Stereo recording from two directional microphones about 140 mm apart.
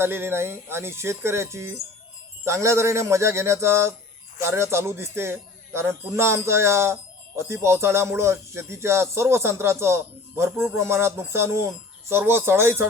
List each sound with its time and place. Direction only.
0.0 s speech: 15° right (ahead or behind)